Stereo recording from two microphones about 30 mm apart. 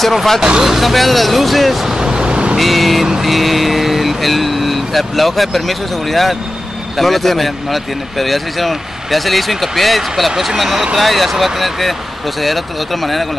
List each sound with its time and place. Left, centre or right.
0.0 s speech: centre
1.9 s vehicle: right
2.5 s speech: centre